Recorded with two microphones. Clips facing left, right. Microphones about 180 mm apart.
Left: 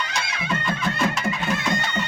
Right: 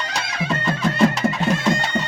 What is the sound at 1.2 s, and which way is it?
Music, 40° right (ahead or behind).